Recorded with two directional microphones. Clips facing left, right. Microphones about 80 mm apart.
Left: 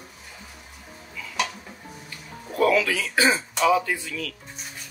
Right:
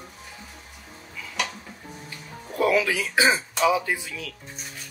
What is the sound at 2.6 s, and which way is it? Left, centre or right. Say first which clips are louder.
Speech: left 1 dB; centre.